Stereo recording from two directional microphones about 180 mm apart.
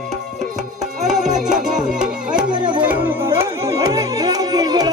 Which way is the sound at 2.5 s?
25° right (ahead or behind).